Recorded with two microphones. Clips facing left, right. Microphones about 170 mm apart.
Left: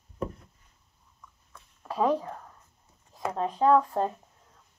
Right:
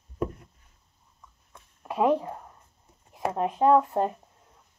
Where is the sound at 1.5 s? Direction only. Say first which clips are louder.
Right 2 dB; 15° right (ahead or behind).